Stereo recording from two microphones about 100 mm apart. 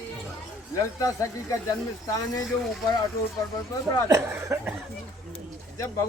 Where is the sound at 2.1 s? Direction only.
40° left (ahead or behind).